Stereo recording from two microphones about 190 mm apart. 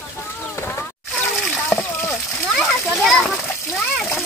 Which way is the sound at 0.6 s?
15° left (ahead or behind).